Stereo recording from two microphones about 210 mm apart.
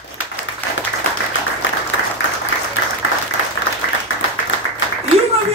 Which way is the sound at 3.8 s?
80° left.